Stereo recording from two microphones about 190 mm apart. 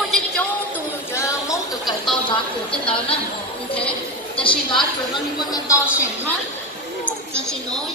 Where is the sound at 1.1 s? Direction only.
15° left (ahead or behind).